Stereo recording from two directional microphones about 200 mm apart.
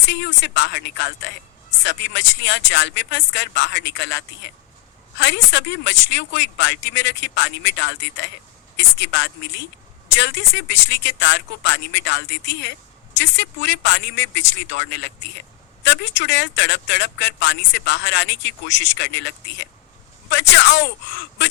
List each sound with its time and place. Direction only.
0.1 s speech: 60° left (ahead or behind)